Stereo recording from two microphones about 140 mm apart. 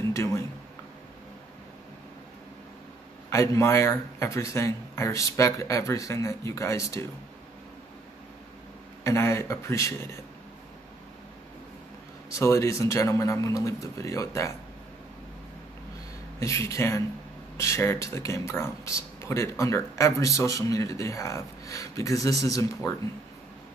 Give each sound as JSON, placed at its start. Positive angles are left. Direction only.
{"t": 0.1, "sound": "a sound", "side_deg": 20}
{"t": 3.3, "sound": "speech", "side_deg": 20}
{"t": 9.0, "sound": "speech", "side_deg": 20}
{"t": 12.4, "sound": "speech", "side_deg": 20}
{"t": 16.3, "sound": "speech", "side_deg": 20}